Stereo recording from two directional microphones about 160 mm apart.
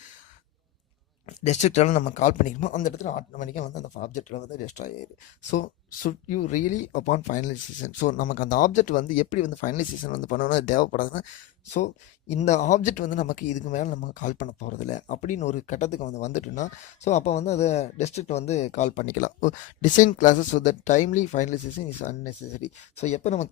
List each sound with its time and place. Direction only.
1.3 s speech: 45° left (ahead or behind)
12.3 s speech: 45° left (ahead or behind)